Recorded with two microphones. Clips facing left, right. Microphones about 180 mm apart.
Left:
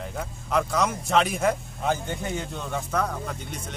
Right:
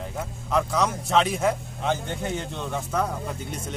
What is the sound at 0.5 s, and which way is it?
A man's voice, centre (ahead or behind).